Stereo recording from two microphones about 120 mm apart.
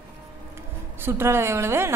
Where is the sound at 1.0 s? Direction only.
20° right (ahead or behind).